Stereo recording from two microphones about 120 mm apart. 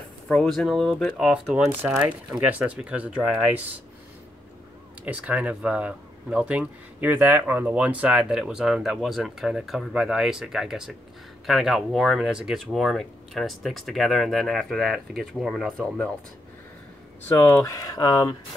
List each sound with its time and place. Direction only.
0.3 s speech: 5° left (ahead or behind)
5.0 s speech: 10° right (ahead or behind)
17.3 s speech: 20° left (ahead or behind)